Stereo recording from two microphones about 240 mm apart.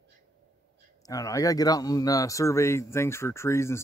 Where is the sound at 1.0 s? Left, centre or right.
Centre.